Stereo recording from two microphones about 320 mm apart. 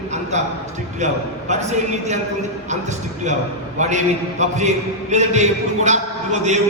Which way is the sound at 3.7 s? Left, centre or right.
Right.